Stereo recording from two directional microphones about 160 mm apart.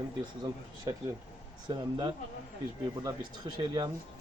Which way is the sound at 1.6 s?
30° right (ahead or behind).